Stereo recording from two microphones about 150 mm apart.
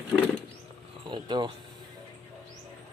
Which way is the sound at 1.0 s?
30° right (ahead or behind).